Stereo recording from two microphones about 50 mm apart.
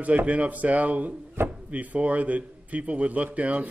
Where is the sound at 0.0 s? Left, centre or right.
Right.